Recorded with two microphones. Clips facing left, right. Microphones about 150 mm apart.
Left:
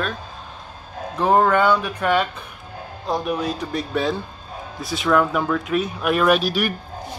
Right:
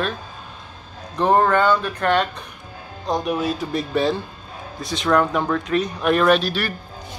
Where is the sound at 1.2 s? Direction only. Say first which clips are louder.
Even; 10° left (ahead or behind).